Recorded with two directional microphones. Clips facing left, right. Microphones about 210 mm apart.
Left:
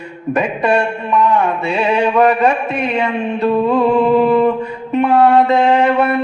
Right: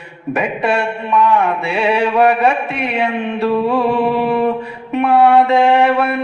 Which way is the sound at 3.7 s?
5° right (ahead or behind).